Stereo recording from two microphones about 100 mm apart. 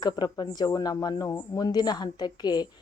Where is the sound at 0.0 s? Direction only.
45° left (ahead or behind).